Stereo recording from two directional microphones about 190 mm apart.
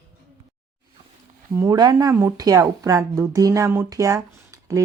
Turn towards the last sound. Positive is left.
turn(degrees=-15)  # may be behind; listen again after turning